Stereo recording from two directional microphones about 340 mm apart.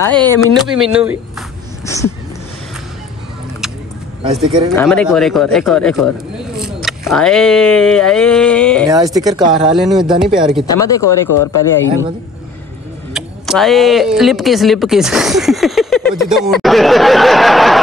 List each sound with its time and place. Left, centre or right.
0.0 s speech: centre
1.9 s cat: centre
4.4 s speech: centre
8.8 s speech: centre
9.7 s speech: centre
11.0 s speech: left
13.1 s speech: centre